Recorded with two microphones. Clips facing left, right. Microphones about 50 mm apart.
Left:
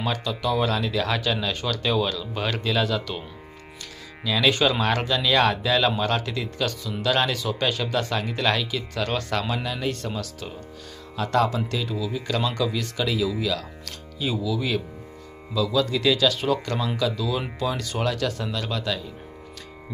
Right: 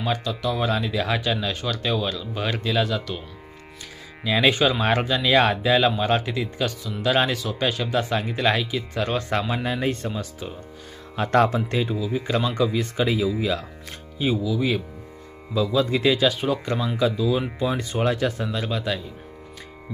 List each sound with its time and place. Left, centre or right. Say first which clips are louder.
0.0 s speech: right 1 dB; centre
4.2 s speech: right 2 dB; right
9.3 s speech: right 2 dB; right
11.2 s speech: right 3 dB; right; by 19.0 s centre